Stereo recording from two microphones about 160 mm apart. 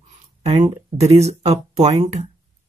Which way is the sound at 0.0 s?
45° right (ahead or behind).